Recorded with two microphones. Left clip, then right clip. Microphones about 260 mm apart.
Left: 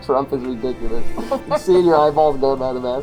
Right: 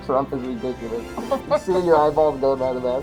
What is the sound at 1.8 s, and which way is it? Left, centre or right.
Speech, left.